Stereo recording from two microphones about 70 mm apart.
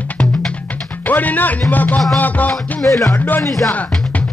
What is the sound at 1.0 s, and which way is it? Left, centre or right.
Speech, left.